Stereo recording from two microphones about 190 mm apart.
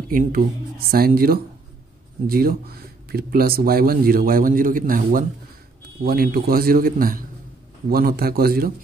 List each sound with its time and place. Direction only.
0.1 s speech: 50° right (ahead or behind)